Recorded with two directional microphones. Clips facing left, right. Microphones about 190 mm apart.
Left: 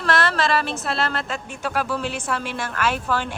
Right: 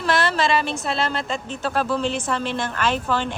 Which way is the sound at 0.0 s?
Centre (ahead or behind).